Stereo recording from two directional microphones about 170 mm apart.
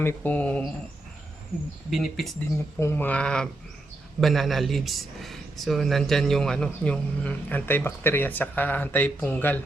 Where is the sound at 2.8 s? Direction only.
15° left (ahead or behind).